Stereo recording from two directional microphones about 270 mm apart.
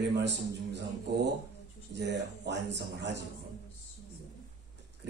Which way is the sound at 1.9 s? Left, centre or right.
Right.